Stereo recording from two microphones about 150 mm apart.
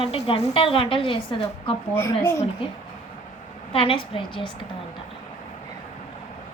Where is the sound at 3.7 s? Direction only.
35° left (ahead or behind).